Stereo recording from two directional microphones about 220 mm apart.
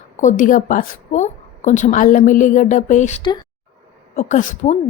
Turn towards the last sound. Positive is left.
turn(degrees=35)  # may be behind; listen again after turning